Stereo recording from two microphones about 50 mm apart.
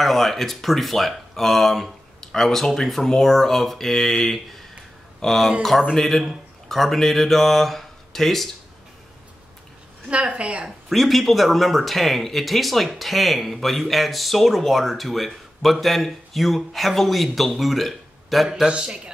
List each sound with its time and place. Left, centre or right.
0.0 s speech: centre
10.0 s a woman's voice: right
10.9 s speech: centre
18.7 s a man's voice: centre